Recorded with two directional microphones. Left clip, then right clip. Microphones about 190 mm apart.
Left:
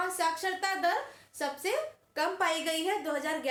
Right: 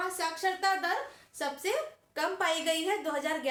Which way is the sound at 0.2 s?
20° left (ahead or behind).